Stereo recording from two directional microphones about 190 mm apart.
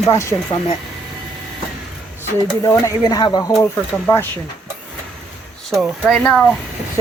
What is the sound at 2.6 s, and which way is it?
Speech, 20° left (ahead or behind).